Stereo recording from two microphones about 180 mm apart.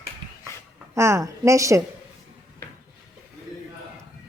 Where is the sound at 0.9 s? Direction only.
15° right (ahead or behind).